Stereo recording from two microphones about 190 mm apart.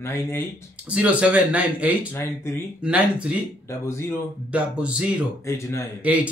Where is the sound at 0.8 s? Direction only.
5° right (ahead or behind).